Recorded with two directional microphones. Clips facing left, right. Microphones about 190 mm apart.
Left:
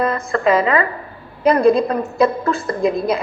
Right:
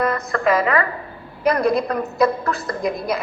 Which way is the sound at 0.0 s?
25° left (ahead or behind).